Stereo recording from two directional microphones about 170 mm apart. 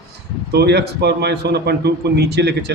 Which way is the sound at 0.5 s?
75° right (ahead or behind).